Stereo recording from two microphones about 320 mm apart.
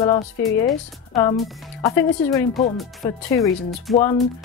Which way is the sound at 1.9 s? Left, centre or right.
Centre.